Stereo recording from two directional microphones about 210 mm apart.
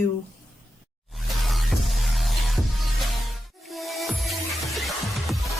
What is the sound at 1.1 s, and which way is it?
Music, centre (ahead or behind).